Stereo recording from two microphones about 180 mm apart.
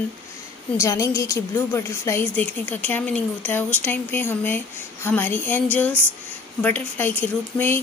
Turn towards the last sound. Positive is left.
turn(degrees=10)  # may be behind; listen again after turning